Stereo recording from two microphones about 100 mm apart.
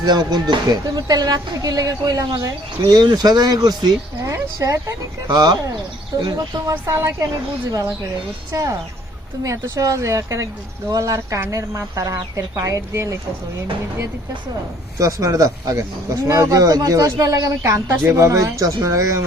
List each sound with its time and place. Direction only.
0.0 s speech: 45° right (ahead or behind)
6.8 s speech: 30° right (ahead or behind)
9.4 s speech: 35° right (ahead or behind)
14.9 s speech: 35° right (ahead or behind)